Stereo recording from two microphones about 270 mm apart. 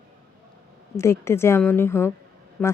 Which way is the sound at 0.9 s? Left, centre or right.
Centre.